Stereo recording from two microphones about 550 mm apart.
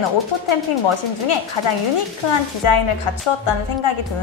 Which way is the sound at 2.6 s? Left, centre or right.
Left.